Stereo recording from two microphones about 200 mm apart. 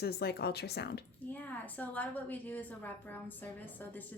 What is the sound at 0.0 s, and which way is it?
Speech, 55° left (ahead or behind).